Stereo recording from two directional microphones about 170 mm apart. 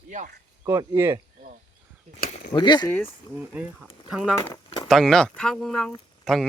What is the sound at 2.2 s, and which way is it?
Speech, 60° left (ahead or behind).